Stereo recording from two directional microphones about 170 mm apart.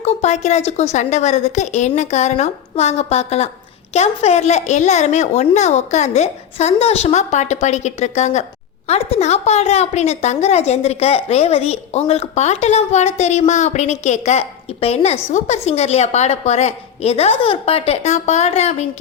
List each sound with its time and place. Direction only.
0.0 s a woman's voice: 40° left (ahead or behind)